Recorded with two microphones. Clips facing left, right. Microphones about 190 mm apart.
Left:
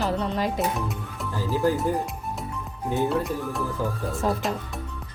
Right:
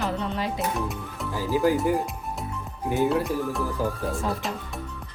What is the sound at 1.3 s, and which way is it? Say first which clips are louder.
Speech: right 1 dB; 15° right (ahead or behind).